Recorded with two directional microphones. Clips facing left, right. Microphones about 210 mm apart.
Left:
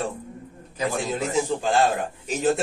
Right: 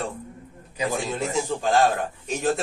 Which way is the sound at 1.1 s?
Centre (ahead or behind).